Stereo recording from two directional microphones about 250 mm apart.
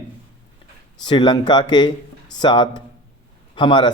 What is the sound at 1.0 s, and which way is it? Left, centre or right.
Speech, centre.